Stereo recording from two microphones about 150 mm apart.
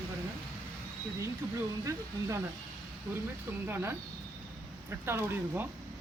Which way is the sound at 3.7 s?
15° right (ahead or behind).